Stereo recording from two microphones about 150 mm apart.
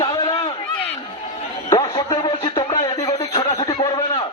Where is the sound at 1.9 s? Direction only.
25° left (ahead or behind).